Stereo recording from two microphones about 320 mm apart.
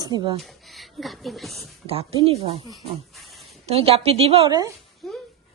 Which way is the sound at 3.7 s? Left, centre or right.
Centre.